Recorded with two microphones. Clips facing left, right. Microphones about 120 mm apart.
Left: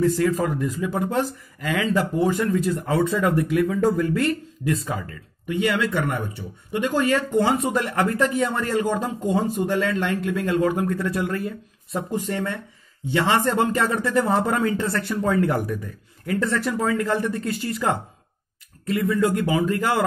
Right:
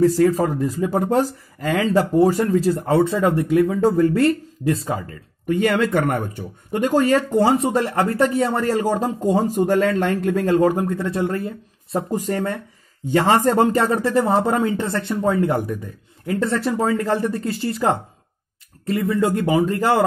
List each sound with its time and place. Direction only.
0.0 s speech: 40° right (ahead or behind)
5.5 s speech: 45° right (ahead or behind); by 20.0 s 30° right (ahead or behind)